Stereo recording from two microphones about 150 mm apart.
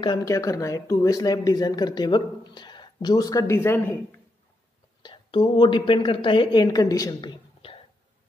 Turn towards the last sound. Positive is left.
turn(degrees=35)  # may be behind; listen again after turning